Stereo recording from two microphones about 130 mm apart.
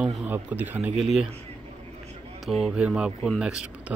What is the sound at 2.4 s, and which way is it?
Speech, 5° right (ahead or behind).